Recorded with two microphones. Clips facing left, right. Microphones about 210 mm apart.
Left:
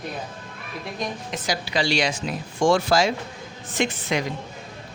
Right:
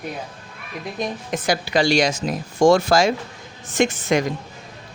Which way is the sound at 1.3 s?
55° right (ahead or behind).